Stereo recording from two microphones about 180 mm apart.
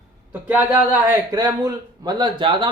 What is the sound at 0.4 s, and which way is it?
A man's voice, 10° right (ahead or behind).